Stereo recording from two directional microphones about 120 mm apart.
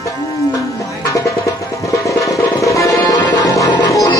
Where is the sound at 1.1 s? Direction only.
25° left (ahead or behind).